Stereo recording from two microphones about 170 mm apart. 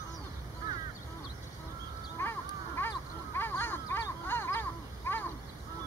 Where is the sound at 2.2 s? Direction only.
15° left (ahead or behind).